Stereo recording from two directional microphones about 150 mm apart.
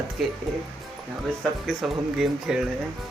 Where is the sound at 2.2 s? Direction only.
5° right (ahead or behind).